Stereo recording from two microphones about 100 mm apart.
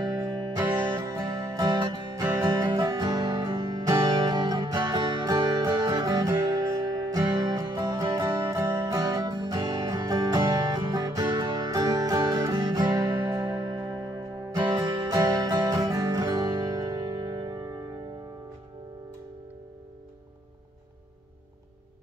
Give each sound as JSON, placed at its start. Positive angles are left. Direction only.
{"t": 0.6, "sound": "music", "side_deg": -40}